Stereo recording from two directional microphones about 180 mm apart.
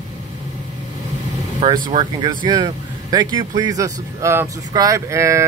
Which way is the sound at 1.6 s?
25° right (ahead or behind).